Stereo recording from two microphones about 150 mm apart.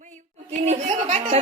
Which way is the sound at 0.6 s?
45° right (ahead or behind).